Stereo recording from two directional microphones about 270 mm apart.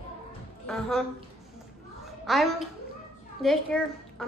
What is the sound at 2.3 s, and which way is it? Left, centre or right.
A woman's voice, centre.